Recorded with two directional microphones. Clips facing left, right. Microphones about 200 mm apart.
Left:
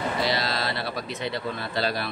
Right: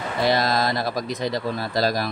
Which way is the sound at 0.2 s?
50° right (ahead or behind).